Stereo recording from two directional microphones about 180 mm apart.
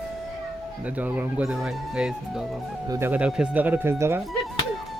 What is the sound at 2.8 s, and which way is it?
Speech, 15° right (ahead or behind).